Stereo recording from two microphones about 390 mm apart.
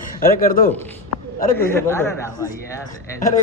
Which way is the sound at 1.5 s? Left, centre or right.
Centre.